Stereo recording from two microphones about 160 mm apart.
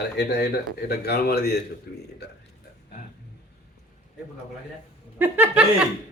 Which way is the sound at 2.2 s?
90° left.